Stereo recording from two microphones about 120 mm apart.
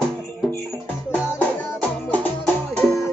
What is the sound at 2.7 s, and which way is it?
Music, centre (ahead or behind).